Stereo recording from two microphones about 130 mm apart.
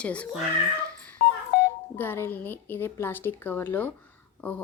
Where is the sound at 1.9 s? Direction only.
15° left (ahead or behind).